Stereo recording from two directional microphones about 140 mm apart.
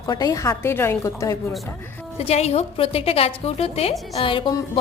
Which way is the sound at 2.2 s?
50° left (ahead or behind).